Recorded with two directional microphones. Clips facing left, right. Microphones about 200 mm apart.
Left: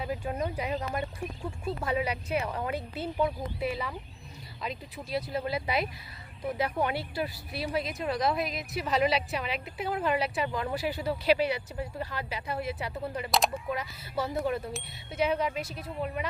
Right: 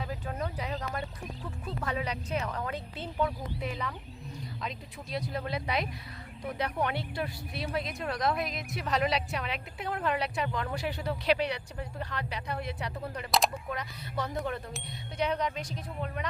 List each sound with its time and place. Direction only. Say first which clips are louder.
0.0 s speech: left 4 dB; 15° left (ahead or behind)